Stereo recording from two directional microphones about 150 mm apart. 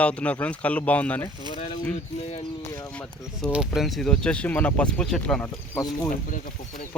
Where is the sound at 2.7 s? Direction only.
20° left (ahead or behind).